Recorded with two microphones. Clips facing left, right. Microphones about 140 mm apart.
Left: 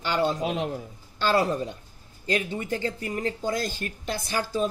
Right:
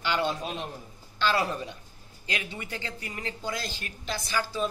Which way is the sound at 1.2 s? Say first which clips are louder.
Left 4 dB; 40° left (ahead or behind).